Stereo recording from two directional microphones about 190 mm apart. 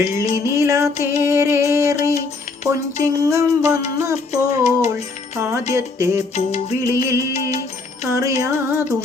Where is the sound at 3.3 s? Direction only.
15° right (ahead or behind).